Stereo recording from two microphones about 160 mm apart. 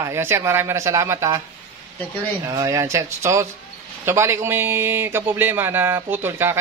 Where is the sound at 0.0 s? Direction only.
15° right (ahead or behind).